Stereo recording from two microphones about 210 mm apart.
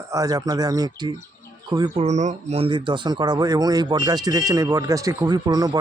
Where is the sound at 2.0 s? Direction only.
35° right (ahead or behind).